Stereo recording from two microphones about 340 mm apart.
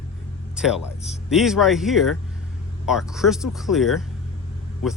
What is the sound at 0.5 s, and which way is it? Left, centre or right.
Speech, centre.